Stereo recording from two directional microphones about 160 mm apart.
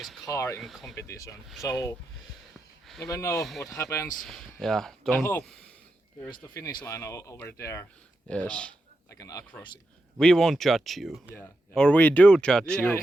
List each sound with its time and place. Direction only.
0.3 s speech: 15° left (ahead or behind)
0.6 s speech: centre (ahead or behind)
0.9 s speech: 20° left (ahead or behind)
3.0 s speech: 20° left (ahead or behind)
3.3 s speech: centre (ahead or behind)
3.8 s speech: 15° left (ahead or behind)
4.2 s speech: centre (ahead or behind)
6.5 s speech: 25° left (ahead or behind)
8.3 s speech: 5° left (ahead or behind)
9.0 s speech: 20° left (ahead or behind)
10.2 s speech: 5° left (ahead or behind)